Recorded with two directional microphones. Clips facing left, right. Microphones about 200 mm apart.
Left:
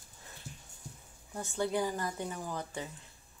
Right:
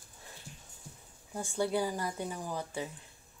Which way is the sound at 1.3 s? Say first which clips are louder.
Right 1 dB; 10° right (ahead or behind).